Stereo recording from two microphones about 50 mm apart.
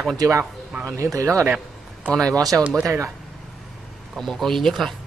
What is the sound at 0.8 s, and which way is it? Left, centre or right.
Speech, right.